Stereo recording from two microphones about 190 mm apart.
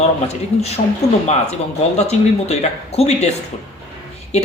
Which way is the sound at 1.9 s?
35° left (ahead or behind).